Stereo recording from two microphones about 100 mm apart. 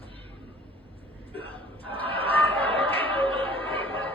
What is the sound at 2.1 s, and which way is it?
Chatter, 65° right (ahead or behind).